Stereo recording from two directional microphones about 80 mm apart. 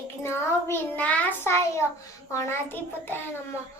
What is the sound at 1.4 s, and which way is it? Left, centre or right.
Child singing, left.